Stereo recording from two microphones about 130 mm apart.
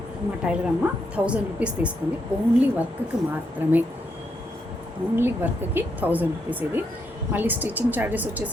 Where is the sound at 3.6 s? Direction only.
15° right (ahead or behind).